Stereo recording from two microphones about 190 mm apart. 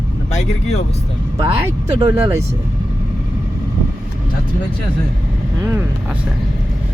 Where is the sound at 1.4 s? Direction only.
15° right (ahead or behind).